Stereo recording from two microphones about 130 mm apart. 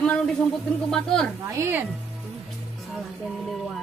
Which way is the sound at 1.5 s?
20° right (ahead or behind).